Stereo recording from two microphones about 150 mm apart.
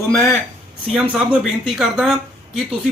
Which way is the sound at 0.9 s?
5° right (ahead or behind).